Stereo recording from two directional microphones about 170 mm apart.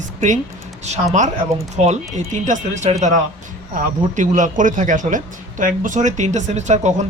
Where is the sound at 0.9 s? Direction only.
45° right (ahead or behind).